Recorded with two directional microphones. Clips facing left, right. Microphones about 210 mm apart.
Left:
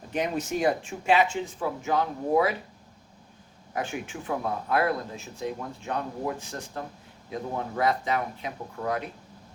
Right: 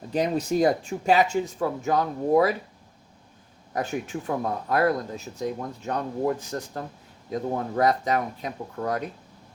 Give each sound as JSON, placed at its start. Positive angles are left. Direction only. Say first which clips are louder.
{"t": 0.1, "sound": "speech", "louder": "right 4 dB", "side_deg": -35}
{"t": 3.7, "sound": "speech", "louder": "right 4 dB", "side_deg": -40}